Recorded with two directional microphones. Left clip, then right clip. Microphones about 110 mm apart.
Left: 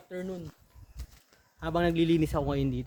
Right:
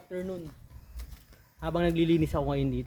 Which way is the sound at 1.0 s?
60° right (ahead or behind).